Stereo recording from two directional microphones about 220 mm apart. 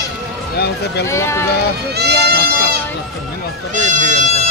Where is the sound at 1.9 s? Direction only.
45° right (ahead or behind).